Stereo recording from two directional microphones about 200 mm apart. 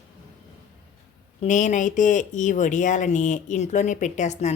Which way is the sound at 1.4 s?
40° left (ahead or behind).